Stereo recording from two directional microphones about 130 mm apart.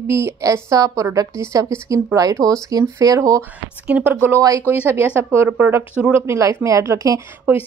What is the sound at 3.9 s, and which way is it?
Speech, 15° right (ahead or behind).